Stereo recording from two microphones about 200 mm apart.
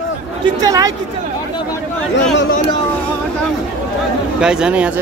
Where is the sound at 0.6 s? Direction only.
20° right (ahead or behind).